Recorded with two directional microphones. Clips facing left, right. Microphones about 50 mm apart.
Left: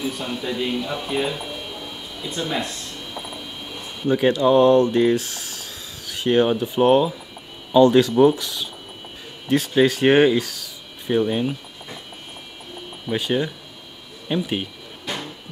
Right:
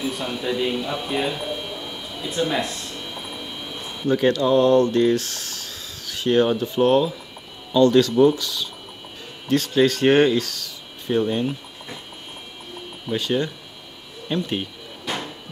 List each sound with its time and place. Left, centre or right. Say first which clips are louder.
0.0 s speech: right 1 dB; centre
4.0 s speech: left 1 dB; centre
13.1 s speech: left 1 dB; centre